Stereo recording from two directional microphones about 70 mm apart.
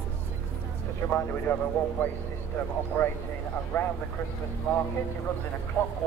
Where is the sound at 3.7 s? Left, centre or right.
Left.